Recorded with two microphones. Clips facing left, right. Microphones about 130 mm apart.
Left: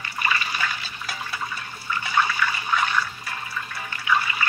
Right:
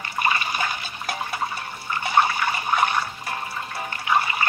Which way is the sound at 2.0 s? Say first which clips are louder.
Right 3 dB; 50° right (ahead or behind).